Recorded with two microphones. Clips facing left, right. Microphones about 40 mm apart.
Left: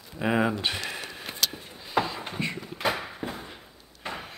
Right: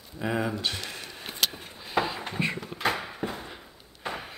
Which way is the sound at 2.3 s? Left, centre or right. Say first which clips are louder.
Right 2 dB; centre.